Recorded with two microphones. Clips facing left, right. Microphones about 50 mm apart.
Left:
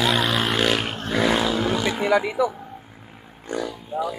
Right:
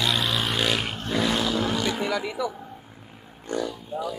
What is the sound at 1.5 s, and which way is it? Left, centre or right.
Roaring cats, centre.